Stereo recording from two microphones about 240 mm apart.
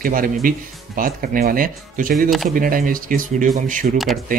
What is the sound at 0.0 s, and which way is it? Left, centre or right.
Speech, right.